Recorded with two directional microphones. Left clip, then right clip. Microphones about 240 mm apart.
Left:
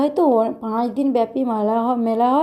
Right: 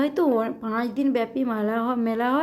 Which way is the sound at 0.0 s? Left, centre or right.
Centre.